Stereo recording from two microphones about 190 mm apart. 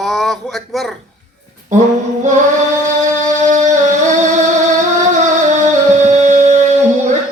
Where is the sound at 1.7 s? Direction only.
40° right (ahead or behind).